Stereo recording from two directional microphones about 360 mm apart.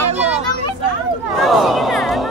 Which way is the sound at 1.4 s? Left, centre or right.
Centre.